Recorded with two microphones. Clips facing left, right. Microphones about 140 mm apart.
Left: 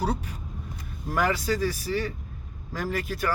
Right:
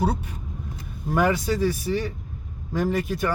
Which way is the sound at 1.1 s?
20° right (ahead or behind).